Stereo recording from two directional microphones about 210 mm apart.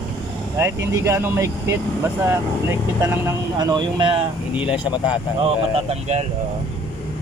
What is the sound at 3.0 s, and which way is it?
Speech, 15° right (ahead or behind).